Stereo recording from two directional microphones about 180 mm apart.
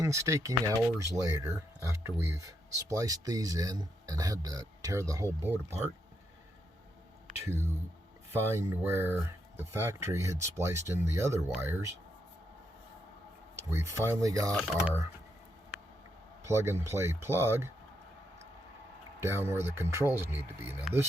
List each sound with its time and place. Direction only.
0.0 s speech: 15° right (ahead or behind)
8.3 s speech: 15° right (ahead or behind)
13.7 s speech: 15° right (ahead or behind)
14.5 s speech: 5° right (ahead or behind)
16.4 s speech: 15° right (ahead or behind)
19.2 s speech: 15° right (ahead or behind)